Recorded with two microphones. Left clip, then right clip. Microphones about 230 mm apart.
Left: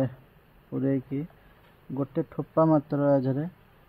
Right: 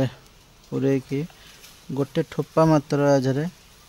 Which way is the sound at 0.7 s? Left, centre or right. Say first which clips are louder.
Right 5 dB; right.